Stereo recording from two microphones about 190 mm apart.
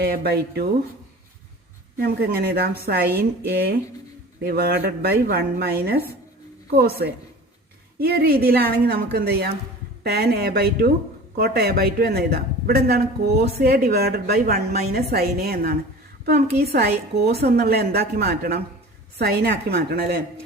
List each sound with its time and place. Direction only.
0.0 s speech: 55° right (ahead or behind)
2.0 s speech: 55° right (ahead or behind)